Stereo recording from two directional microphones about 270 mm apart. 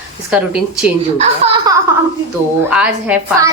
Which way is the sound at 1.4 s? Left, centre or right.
Right.